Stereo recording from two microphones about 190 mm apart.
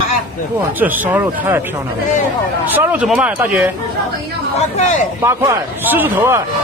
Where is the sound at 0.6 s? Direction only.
10° right (ahead or behind).